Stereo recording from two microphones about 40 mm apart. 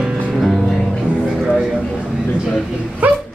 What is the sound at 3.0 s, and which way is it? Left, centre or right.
Dog, right.